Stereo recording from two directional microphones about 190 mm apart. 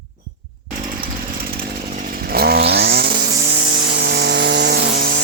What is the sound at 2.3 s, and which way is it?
Chainsaw, 55° right (ahead or behind).